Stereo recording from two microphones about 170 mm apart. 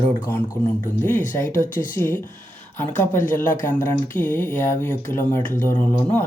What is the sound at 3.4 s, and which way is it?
Speech, 50° left (ahead or behind).